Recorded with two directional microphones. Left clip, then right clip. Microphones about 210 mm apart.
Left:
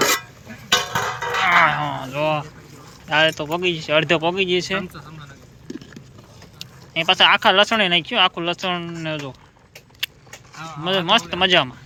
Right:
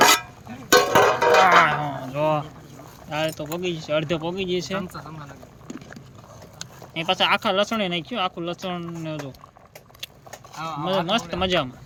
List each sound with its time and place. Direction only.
0.8 s music: 50° right (ahead or behind)
1.5 s a sound: 10° right (ahead or behind)
3.1 s speech: 5° right (ahead or behind)
6.9 s speech: 5° right (ahead or behind)
10.0 s vehicle: centre (ahead or behind)
10.5 s a sound: 60° right (ahead or behind)
11.0 s speech: 5° right (ahead or behind)